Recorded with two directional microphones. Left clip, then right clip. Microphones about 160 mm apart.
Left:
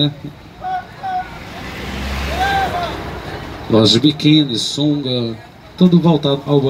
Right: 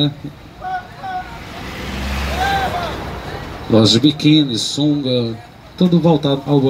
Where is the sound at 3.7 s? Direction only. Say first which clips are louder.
Even; 65° right (ahead or behind).